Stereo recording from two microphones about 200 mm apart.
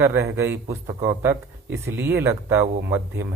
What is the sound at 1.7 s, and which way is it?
Speech, 60° right (ahead or behind).